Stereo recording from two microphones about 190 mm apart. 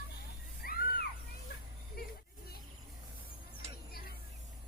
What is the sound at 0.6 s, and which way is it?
Music, 50° left (ahead or behind).